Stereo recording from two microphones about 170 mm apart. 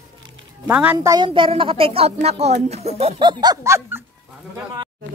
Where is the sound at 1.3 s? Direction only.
30° right (ahead or behind); by 4.0 s 15° right (ahead or behind).